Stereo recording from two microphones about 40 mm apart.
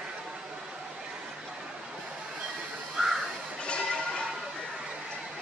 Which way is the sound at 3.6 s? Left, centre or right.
Left.